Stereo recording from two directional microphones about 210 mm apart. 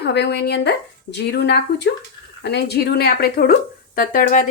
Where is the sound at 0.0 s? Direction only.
50° left (ahead or behind).